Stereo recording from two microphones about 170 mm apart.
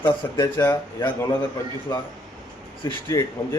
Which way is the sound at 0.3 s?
25° left (ahead or behind).